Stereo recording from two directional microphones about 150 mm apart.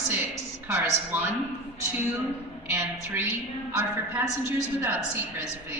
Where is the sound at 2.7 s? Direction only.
15° right (ahead or behind).